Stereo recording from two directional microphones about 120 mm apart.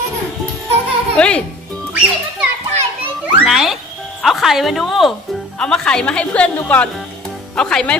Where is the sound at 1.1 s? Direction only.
10° left (ahead or behind).